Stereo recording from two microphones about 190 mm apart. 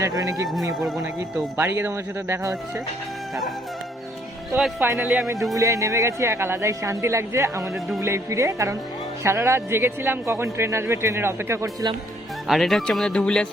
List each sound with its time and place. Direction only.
0.0 s a man's voice: 15° right (ahead or behind)
4.5 s speech: centre (ahead or behind)
5.5 s a man's voice: 15° right (ahead or behind)
12.5 s speech: centre (ahead or behind)